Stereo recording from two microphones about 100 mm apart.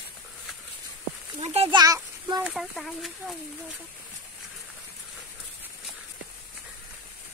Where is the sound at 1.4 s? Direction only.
90° right.